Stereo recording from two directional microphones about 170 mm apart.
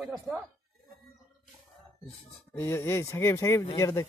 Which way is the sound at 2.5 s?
15° left (ahead or behind).